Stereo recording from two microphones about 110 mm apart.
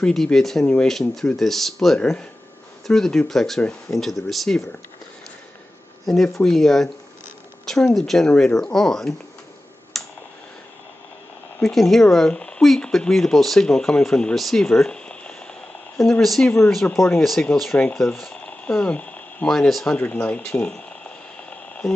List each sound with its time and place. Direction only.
0.0 s speech: 5° left (ahead or behind)
6.0 s speech: 5° left (ahead or behind)
9.9 s tick: 5° left (ahead or behind)
11.6 s speech: centre (ahead or behind)
16.4 s speech: 15° left (ahead or behind)
17.2 s speech: centre (ahead or behind)
17.7 s speech: 15° left (ahead or behind)
18.1 s a sound: 5° left (ahead or behind)